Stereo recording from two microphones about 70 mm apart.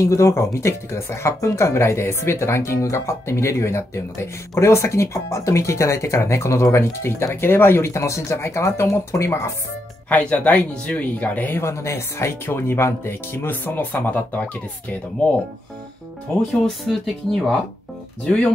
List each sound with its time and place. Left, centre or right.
0.0 s speech: left
10.0 s speech: left
11.6 s speech: left
16.6 s speech: centre
18.2 s speech: centre